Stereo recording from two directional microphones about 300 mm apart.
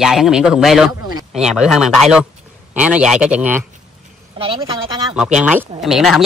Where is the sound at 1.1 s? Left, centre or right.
Centre.